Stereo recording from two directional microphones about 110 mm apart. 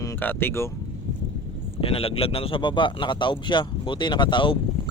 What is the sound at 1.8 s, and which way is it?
Speech, 60° left (ahead or behind).